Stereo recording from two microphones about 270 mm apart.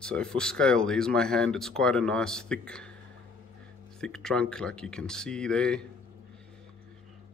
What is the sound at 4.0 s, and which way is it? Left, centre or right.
Speech, centre.